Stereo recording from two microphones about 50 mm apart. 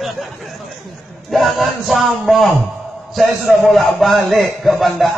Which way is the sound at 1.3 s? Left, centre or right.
Centre.